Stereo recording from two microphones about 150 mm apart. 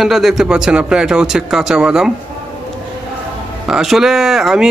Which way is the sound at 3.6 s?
5° right (ahead or behind).